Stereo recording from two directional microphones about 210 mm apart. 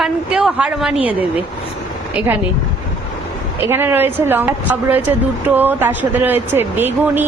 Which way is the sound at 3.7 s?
10° right (ahead or behind).